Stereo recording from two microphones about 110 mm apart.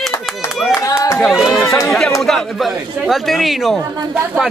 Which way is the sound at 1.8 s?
5° left (ahead or behind).